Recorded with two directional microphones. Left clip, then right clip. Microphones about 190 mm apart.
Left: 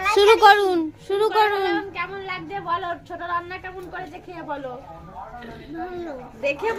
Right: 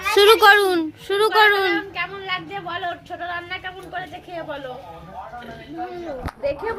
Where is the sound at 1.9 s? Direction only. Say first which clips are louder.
Right 3 dB; 50° left (ahead or behind).